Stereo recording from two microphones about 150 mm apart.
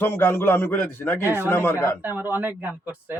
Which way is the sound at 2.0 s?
10° right (ahead or behind).